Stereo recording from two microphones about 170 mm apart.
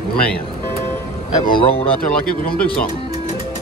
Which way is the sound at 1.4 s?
30° left (ahead or behind).